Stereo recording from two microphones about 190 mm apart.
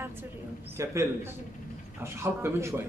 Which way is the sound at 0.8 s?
15° right (ahead or behind).